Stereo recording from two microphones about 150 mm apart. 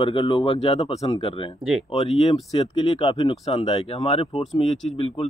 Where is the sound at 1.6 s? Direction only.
5° right (ahead or behind).